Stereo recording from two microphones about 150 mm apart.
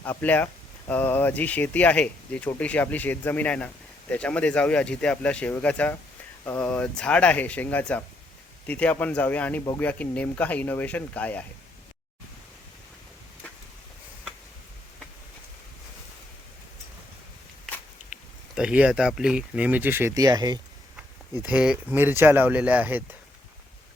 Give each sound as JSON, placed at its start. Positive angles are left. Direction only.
{"t": 0.0, "sound": "speech", "side_deg": 10}
{"t": 18.1, "sound": "a sound", "side_deg": -10}
{"t": 18.5, "sound": "speech", "side_deg": -5}
{"t": 21.3, "sound": "speech", "side_deg": -10}